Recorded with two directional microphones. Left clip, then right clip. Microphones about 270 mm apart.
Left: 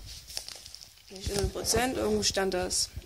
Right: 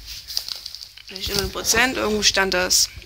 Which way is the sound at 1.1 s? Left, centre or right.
Centre.